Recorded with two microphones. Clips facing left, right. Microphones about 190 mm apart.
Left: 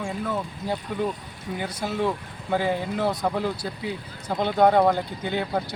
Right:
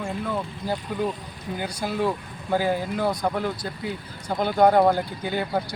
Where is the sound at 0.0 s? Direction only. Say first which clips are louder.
Even; centre (ahead or behind).